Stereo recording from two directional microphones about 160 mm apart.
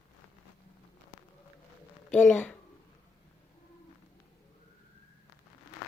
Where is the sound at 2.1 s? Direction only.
5° left (ahead or behind).